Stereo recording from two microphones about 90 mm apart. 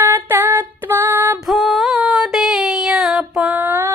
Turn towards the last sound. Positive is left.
turn(degrees=-25)  # may be behind; listen again after turning